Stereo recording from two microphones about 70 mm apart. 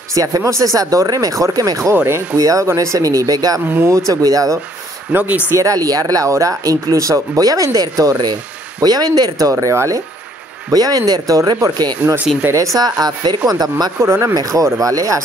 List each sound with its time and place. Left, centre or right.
0.1 s speech: right
5.1 s speech: right
5.6 s speech: right
9.5 s speech: right
10.7 s speech: right
12.5 s speech: right
13.0 s speech: right
13.5 s speech: right
14.0 s speech: right
14.5 s speech: right